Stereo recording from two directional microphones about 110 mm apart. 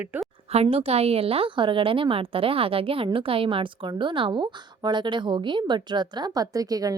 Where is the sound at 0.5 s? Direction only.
65° right (ahead or behind).